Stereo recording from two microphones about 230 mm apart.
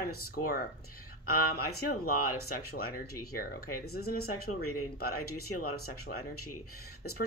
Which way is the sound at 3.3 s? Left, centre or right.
Left.